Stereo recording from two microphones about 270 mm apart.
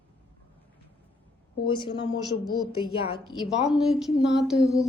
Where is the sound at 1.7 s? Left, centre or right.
Centre.